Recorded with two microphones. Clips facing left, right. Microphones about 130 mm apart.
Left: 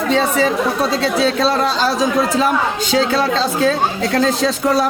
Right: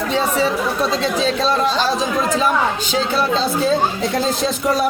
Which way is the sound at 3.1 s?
90° left.